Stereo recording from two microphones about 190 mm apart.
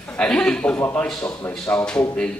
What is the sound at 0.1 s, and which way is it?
A man's voice, 5° left (ahead or behind).